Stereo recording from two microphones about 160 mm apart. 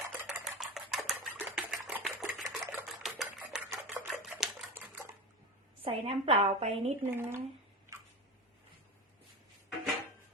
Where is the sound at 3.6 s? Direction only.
10° right (ahead or behind).